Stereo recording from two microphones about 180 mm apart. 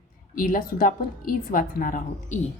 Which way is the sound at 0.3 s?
50° left (ahead or behind).